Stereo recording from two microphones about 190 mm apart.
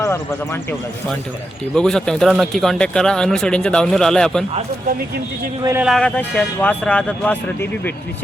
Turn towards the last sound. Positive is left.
turn(degrees=10)  # may be behind; listen again after turning